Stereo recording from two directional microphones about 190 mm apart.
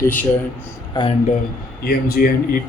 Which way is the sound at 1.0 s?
25° left (ahead or behind).